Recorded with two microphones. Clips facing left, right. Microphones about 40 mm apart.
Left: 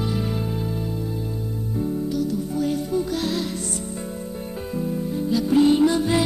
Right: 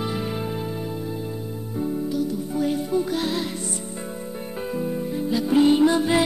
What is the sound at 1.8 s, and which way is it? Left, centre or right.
Music, centre.